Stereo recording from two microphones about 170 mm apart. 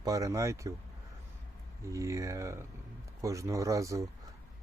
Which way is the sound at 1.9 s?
20° right (ahead or behind).